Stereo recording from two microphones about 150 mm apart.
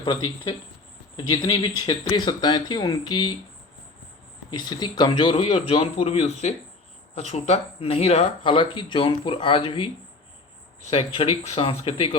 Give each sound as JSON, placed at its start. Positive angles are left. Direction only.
{"t": 0.0, "sound": "speech", "side_deg": 30}
{"t": 4.5, "sound": "speech", "side_deg": 30}
{"t": 5.4, "sound": "speech", "side_deg": 50}
{"t": 5.6, "sound": "speech", "side_deg": 40}
{"t": 10.9, "sound": "speech", "side_deg": 40}